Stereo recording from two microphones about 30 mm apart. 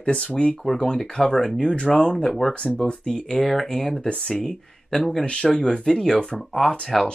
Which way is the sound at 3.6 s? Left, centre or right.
Left.